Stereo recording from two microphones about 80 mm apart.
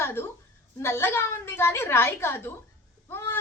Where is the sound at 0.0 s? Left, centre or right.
Left.